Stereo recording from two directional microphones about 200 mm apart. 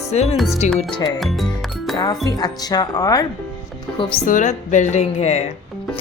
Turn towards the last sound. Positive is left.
turn(degrees=35)  # may be behind; listen again after turning